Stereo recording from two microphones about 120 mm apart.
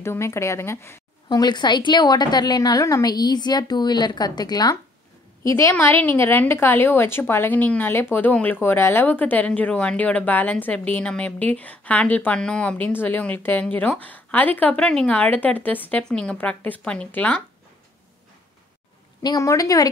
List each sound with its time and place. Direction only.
0.0 s speech: 20° left (ahead or behind)
1.3 s a woman's voice: 35° left (ahead or behind); by 17.4 s 10° left (ahead or behind)
19.2 s speech: 30° left (ahead or behind)